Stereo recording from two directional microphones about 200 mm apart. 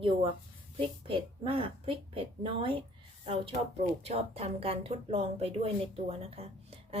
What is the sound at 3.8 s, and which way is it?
Speech, 30° right (ahead or behind).